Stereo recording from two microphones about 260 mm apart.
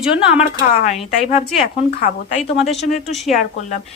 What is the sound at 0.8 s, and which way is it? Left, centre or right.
A woman's voice, left.